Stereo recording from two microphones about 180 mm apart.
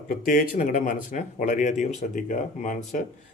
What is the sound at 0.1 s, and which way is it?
Speech, 50° left (ahead or behind).